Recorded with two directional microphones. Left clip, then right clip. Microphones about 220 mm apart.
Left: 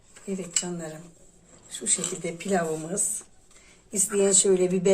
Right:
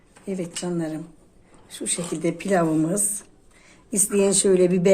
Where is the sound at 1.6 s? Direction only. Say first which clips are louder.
Right 1 dB; 35° right (ahead or behind).